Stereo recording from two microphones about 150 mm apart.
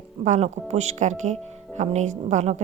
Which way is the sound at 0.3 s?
45° right (ahead or behind).